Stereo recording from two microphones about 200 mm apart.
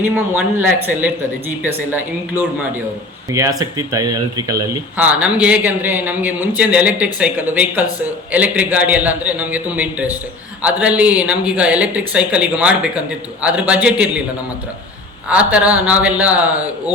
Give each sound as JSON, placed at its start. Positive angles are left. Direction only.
{"t": 0.0, "sound": "speech", "side_deg": -10}
{"t": 4.9, "sound": "speech", "side_deg": -5}
{"t": 15.3, "sound": "speech", "side_deg": -5}